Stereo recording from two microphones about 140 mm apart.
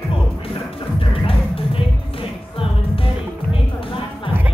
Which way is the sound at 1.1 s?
40° left (ahead or behind).